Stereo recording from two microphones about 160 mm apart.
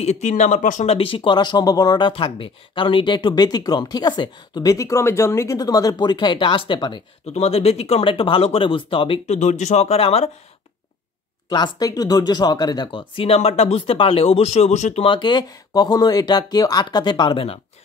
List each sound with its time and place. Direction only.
0.0 s speech: 45° left (ahead or behind)
7.3 s speech: 40° left (ahead or behind)
11.4 s speech: 25° left (ahead or behind); by 15.0 s 45° left (ahead or behind)
15.0 s speech: 30° left (ahead or behind)